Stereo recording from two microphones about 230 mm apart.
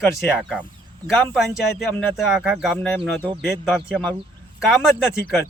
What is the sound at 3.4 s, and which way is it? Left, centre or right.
Speech, centre.